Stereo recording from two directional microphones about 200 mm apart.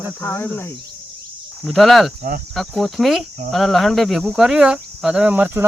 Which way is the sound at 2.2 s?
45° right (ahead or behind).